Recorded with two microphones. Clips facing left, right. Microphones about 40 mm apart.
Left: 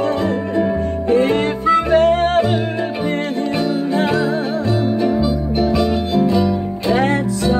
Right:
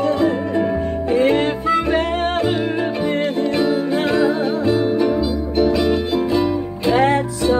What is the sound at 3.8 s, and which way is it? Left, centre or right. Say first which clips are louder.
Music: even; centre.